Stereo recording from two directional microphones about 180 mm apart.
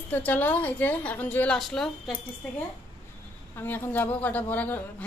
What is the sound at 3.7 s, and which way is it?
A woman's voice, 10° left (ahead or behind).